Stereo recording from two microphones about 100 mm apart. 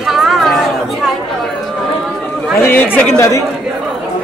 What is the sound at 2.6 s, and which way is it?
Speech, 20° left (ahead or behind).